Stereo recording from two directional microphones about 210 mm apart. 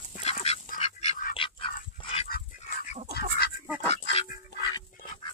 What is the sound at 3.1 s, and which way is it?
Duck, 50° left (ahead or behind).